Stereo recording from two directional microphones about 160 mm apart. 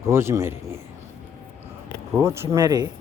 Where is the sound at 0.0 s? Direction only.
15° right (ahead or behind).